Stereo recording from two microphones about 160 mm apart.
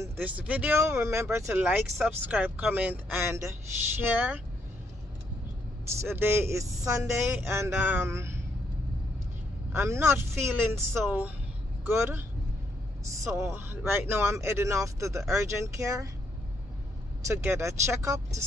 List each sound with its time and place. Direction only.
0.0 s speech: 10° right (ahead or behind)
6.0 s speech: 15° right (ahead or behind)
9.7 s speech: 15° right (ahead or behind)
13.5 s speech: 15° right (ahead or behind)
17.3 s speech: 15° right (ahead or behind)